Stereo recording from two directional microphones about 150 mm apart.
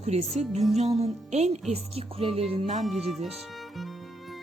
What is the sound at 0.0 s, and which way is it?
Music, 45° right (ahead or behind).